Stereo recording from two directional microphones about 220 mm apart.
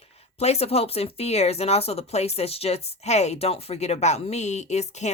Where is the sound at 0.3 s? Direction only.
30° left (ahead or behind).